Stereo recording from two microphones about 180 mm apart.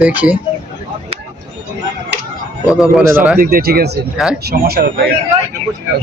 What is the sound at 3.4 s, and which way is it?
Speech, 55° right (ahead or behind).